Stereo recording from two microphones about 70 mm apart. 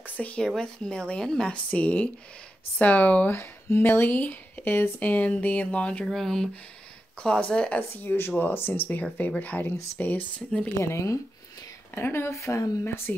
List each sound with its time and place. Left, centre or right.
0.0 s speech: left
3.3 s speech: left; by 6.0 s centre
6.0 s speech: centre
7.2 s speech: centre
8.0 s speech: left
10.8 s speech: left
11.9 s speech: left
12.8 s speech: left